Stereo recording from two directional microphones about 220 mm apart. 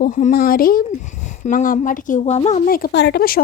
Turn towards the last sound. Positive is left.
turn(degrees=45)  # may be behind; listen again after turning